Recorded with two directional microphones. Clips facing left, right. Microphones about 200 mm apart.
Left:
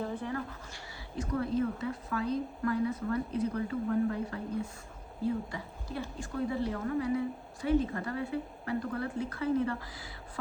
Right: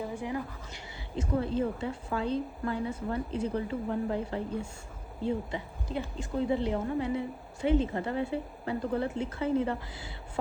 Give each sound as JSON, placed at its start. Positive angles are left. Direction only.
{"t": 0.0, "sound": "speech", "side_deg": -10}
{"t": 1.1, "sound": "a woman's voice", "side_deg": -25}